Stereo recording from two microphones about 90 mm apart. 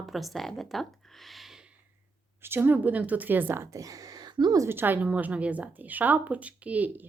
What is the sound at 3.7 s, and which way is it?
Speech, 40° right (ahead or behind).